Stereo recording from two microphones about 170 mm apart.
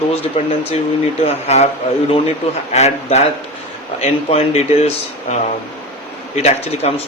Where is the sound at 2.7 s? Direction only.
40° left (ahead or behind).